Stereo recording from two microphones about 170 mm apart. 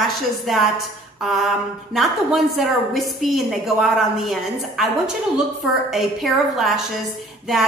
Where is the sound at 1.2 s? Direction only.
Centre (ahead or behind).